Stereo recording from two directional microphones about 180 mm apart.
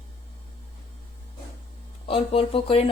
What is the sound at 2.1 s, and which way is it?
Speech, 30° left (ahead or behind).